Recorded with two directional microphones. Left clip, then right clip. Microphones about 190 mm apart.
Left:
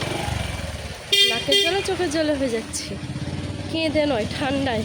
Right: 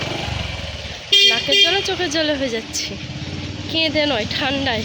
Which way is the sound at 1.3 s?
5° left (ahead or behind).